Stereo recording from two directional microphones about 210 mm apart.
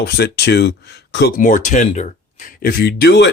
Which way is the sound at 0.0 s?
50° left (ahead or behind).